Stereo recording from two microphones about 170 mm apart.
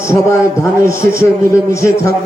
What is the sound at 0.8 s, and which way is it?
Speech, 60° right (ahead or behind).